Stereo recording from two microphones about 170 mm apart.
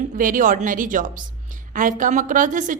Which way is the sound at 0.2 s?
55° right (ahead or behind).